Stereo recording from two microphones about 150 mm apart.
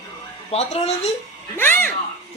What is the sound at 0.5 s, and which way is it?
Speech, 45° left (ahead or behind).